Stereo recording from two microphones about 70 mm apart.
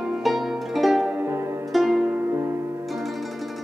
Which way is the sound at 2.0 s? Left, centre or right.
Right.